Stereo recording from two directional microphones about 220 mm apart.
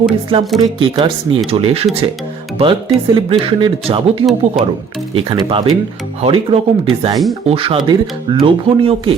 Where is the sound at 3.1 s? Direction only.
25° right (ahead or behind).